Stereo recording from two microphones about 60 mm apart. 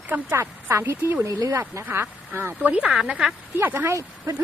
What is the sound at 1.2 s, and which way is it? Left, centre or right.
Speech, right.